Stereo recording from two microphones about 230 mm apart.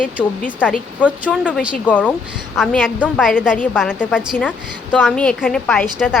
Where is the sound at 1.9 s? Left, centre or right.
Centre.